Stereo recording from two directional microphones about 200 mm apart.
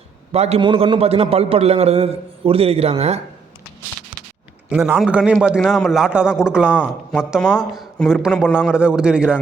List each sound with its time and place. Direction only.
0.3 s a man's voice: 30° right (ahead or behind)
4.7 s a man's voice: 5° right (ahead or behind)